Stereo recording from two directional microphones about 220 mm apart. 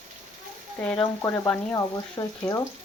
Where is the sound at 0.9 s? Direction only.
5° left (ahead or behind).